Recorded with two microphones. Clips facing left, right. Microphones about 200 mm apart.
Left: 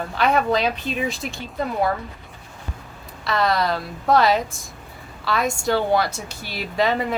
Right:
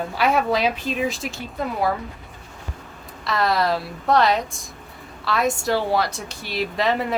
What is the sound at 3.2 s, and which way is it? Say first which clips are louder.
A woman's voice: even; centre (ahead or behind).